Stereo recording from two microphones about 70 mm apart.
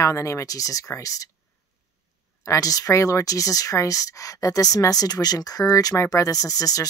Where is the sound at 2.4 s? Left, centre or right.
Left.